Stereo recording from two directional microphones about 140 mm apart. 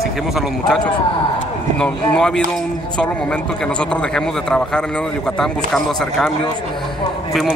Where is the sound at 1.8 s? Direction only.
5° left (ahead or behind).